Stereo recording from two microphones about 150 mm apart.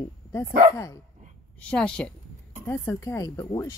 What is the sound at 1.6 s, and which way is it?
Speech, 5° left (ahead or behind).